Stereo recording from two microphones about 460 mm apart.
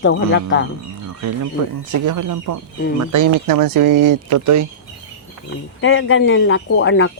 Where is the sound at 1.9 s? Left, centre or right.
Right.